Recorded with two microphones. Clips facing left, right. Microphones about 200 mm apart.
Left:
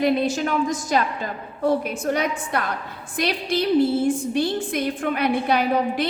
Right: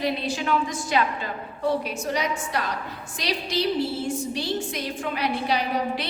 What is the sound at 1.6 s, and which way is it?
A woman's voice, 55° left (ahead or behind).